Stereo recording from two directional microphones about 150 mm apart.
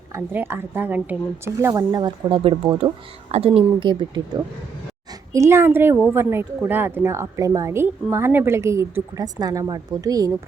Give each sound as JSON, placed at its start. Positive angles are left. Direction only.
{"t": 0.1, "sound": "speech", "side_deg": -15}
{"t": 1.6, "sound": "speech", "side_deg": -25}
{"t": 5.3, "sound": "speech", "side_deg": -20}